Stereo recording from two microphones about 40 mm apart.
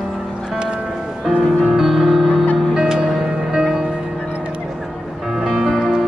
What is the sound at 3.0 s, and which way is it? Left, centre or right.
Music, centre.